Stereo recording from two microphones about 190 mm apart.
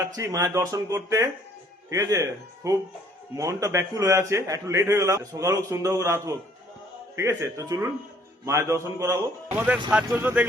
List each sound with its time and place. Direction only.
0.2 s a man's voice: 15° right (ahead or behind)